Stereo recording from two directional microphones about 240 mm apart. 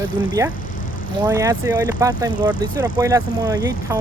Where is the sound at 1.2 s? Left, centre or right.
Centre.